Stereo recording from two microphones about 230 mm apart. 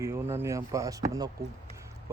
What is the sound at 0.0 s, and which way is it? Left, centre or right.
Speech, centre.